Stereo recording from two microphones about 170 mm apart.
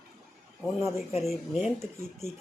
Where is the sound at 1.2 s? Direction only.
Centre (ahead or behind).